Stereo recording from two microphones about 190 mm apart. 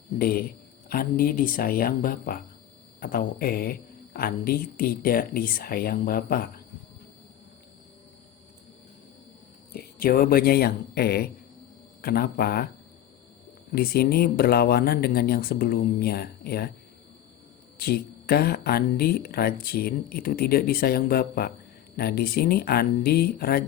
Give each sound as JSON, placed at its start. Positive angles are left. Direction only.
{"t": 0.2, "sound": "speech", "side_deg": 50}
{"t": 9.7, "sound": "speech", "side_deg": 50}
{"t": 13.7, "sound": "speech", "side_deg": 55}
{"t": 17.7, "sound": "speech", "side_deg": 55}